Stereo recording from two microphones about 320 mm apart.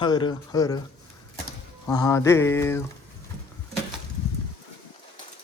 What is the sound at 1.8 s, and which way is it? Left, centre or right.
Speech, centre.